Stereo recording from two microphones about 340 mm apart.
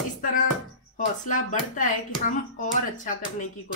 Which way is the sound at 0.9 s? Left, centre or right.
Left.